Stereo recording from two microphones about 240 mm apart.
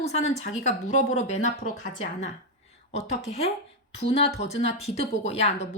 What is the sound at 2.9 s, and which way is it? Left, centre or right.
Speech, left.